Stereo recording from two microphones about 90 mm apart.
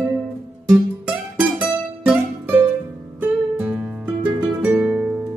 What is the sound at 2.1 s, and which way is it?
Music, 20° right (ahead or behind).